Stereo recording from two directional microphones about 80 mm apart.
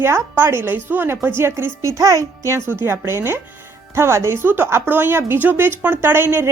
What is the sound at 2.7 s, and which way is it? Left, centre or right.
A woman's voice, right.